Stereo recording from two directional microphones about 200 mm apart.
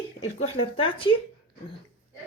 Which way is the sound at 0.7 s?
25° left (ahead or behind).